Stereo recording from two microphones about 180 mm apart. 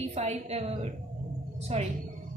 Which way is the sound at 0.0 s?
35° right (ahead or behind).